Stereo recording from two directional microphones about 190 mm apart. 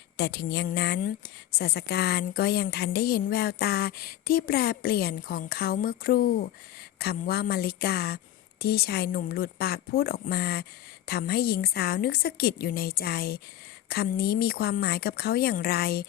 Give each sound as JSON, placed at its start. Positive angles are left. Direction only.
{"t": 0.2, "sound": "a woman's voice", "side_deg": 60}